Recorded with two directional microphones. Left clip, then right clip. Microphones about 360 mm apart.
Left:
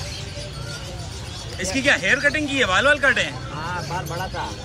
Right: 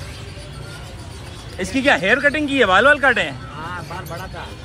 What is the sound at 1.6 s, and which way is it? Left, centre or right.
Speech, centre.